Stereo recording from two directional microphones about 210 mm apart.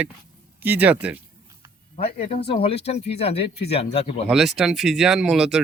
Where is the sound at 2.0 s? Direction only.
30° left (ahead or behind).